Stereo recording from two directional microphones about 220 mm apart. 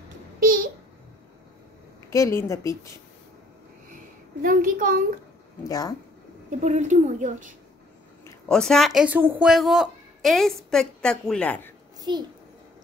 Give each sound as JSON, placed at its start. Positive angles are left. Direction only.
{"t": 2.0, "sound": "a woman's voice", "side_deg": 15}
{"t": 4.4, "sound": "a woman's voice", "side_deg": -40}
{"t": 5.6, "sound": "a woman's voice", "side_deg": 15}
{"t": 6.6, "sound": "a woman's voice", "side_deg": -30}
{"t": 8.5, "sound": "speech", "side_deg": 0}
{"t": 12.0, "sound": "a child's voice", "side_deg": -20}